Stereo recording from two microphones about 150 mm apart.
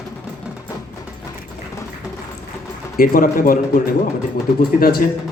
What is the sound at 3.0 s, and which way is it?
Speech, 65° left (ahead or behind).